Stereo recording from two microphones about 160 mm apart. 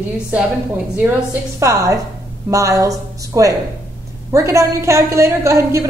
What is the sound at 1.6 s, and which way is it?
A man's voice, 20° right (ahead or behind).